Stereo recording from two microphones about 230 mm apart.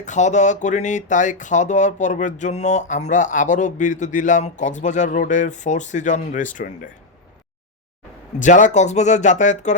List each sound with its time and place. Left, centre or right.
0.0 s speech: left
8.4 s speech: left